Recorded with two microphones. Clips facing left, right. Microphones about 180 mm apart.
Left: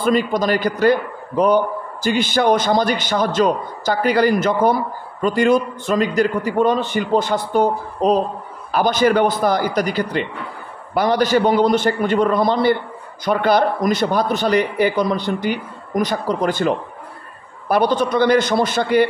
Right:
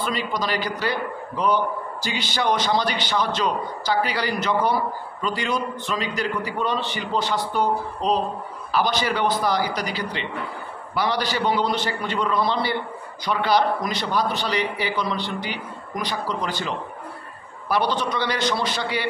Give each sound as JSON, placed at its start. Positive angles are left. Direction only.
{"t": 0.0, "sound": "a man's voice", "side_deg": 50}